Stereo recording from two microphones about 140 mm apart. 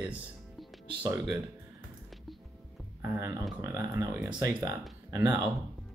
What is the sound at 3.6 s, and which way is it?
Speech, 20° right (ahead or behind).